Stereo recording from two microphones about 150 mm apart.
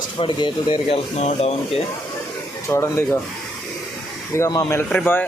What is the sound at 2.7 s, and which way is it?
Speech, 15° left (ahead or behind).